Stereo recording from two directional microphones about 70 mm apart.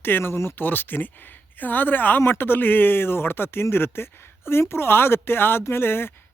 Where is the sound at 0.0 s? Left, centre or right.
Left.